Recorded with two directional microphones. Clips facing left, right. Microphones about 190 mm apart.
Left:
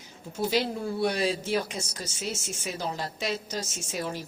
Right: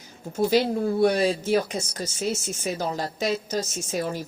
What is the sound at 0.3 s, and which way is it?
A woman's voice, 45° right (ahead or behind).